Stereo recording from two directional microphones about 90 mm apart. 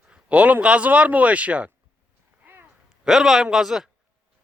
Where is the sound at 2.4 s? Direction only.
20° right (ahead or behind).